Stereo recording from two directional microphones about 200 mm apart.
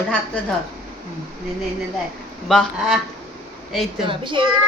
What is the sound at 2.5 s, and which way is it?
Speech, centre (ahead or behind).